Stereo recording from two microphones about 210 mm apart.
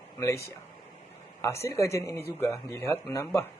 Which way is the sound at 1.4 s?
15° left (ahead or behind).